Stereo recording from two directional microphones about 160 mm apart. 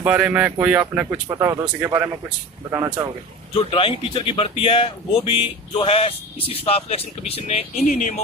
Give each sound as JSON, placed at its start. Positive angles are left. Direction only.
{"t": 0.0, "sound": "speech", "side_deg": -10}
{"t": 3.5, "sound": "speech", "side_deg": 35}